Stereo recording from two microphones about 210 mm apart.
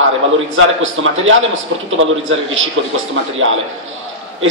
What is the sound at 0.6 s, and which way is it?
A man's voice, 65° right (ahead or behind).